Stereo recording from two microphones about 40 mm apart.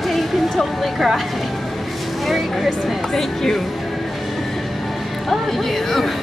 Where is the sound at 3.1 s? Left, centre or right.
Centre.